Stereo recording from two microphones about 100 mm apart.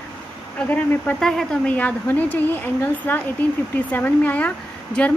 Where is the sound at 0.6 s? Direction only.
20° left (ahead or behind).